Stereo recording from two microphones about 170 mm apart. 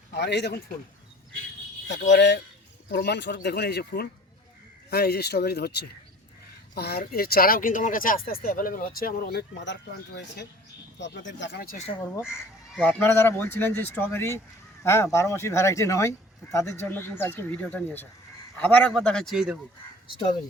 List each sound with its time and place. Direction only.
0.1 s speech: 80° left
1.9 s speech: 90° left
2.9 s speech: 75° left (ahead or behind)
11.0 s speech: 90° left; by 11.8 s 65° left (ahead or behind)
12.2 s speech: 5° right (ahead or behind)
12.8 s speech: 10° left (ahead or behind)